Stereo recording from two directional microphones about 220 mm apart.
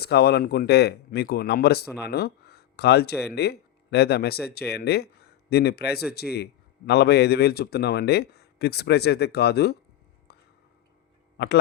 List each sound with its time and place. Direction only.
0.0 s a man's voice: 50° left (ahead or behind)
10.3 s whispering: 45° left (ahead or behind)